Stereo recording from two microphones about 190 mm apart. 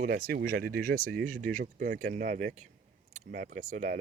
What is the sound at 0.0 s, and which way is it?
Speech, 55° right (ahead or behind).